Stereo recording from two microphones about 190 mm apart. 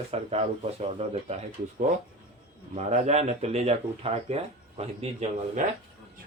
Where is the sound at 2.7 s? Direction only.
35° right (ahead or behind).